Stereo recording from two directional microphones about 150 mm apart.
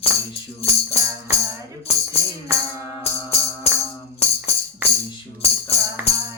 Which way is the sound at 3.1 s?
40° left (ahead or behind).